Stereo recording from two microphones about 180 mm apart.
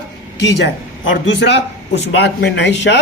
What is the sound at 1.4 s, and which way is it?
A man's voice, 70° left (ahead or behind).